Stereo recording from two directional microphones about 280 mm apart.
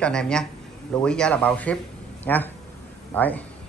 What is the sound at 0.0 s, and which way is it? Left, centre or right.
A man's voice, centre.